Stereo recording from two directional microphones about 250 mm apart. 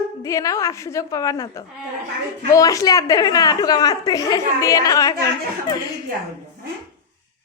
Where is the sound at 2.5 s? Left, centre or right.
Centre.